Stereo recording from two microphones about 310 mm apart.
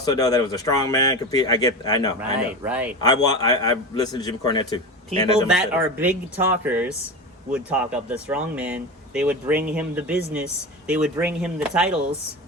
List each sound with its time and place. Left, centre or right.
0.0 s speech: centre
2.6 s speech: centre
3.0 s speech: centre
5.1 s a man's voice: centre
5.5 s speech: centre